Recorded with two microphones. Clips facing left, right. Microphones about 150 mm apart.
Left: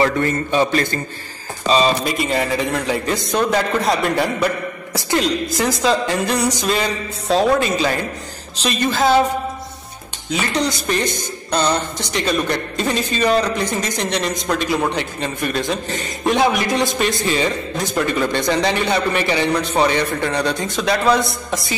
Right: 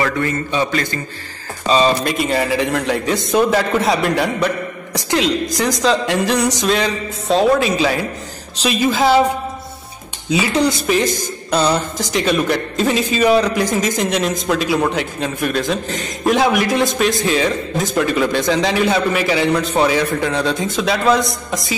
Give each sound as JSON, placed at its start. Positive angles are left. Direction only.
{"t": 2.0, "sound": "a man's voice", "side_deg": 0}
{"t": 10.3, "sound": "a man's voice", "side_deg": -10}